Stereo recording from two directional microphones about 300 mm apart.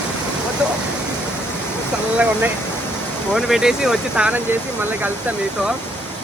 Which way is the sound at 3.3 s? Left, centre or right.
Centre.